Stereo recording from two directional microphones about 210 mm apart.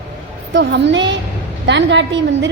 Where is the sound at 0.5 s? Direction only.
55° right (ahead or behind).